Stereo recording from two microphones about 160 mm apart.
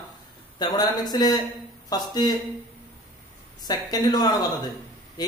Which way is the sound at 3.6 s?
25° left (ahead or behind).